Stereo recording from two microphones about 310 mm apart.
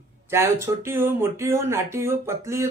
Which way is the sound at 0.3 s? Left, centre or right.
Centre.